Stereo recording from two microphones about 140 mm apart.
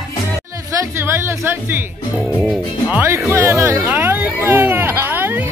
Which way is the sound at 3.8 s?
10° right (ahead or behind).